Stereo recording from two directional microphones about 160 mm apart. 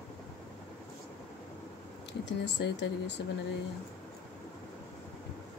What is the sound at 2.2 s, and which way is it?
Speech, 90° left.